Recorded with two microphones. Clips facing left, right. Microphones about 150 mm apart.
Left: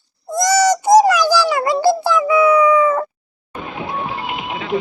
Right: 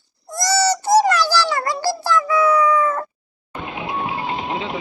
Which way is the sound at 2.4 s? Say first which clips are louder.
Left 5 dB; 5° left (ahead or behind).